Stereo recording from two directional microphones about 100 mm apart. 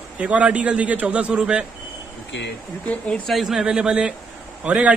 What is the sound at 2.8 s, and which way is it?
Speech, 15° left (ahead or behind).